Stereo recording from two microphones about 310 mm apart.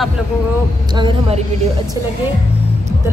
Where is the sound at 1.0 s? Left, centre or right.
Centre.